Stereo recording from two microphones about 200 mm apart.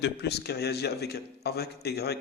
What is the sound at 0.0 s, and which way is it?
A man's voice, 55° left (ahead or behind).